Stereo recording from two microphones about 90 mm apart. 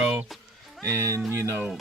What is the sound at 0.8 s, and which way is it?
Speech, 30° right (ahead or behind).